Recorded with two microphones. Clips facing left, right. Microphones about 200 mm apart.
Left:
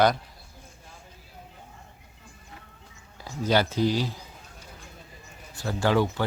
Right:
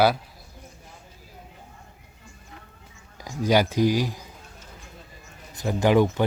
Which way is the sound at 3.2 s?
15° right (ahead or behind).